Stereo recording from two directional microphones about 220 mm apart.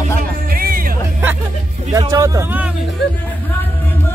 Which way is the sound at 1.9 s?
15° right (ahead or behind).